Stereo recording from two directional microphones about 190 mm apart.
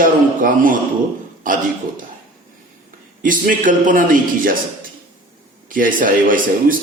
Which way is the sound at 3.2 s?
45° right (ahead or behind).